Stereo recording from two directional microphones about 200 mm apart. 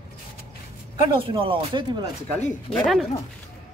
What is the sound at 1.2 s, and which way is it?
Speech, 25° right (ahead or behind).